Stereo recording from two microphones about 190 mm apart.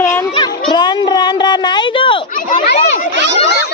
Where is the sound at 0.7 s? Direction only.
25° left (ahead or behind).